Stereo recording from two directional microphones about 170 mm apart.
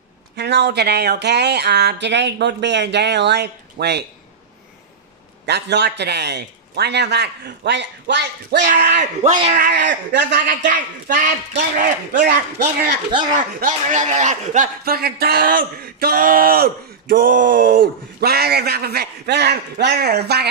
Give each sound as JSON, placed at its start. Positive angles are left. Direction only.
{"t": 0.4, "sound": "speech", "side_deg": -80}
{"t": 5.5, "sound": "speech", "side_deg": -80}
{"t": 8.5, "sound": "speech", "side_deg": -50}
{"t": 9.7, "sound": "speech", "side_deg": -90}
{"t": 10.4, "sound": "speech", "side_deg": -50}
{"t": 14.9, "sound": "speech", "side_deg": -65}